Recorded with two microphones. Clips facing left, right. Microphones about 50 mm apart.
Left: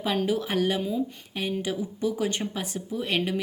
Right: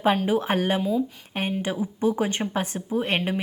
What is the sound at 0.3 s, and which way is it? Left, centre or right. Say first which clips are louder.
Speech: right 3 dB; right.